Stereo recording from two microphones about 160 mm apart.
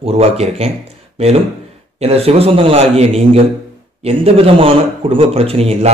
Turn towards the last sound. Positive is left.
turn(degrees=-35)  # may be behind; listen again after turning